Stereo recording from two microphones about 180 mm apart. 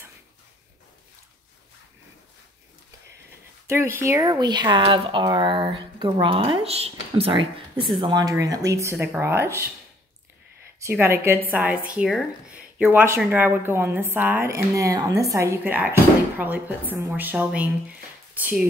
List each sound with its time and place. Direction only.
3.6 s speech: 15° right (ahead or behind)
10.8 s speech: 15° right (ahead or behind)